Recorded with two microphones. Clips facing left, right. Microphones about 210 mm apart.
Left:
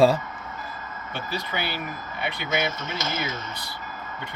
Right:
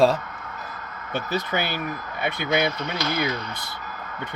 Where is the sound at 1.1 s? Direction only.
50° right (ahead or behind).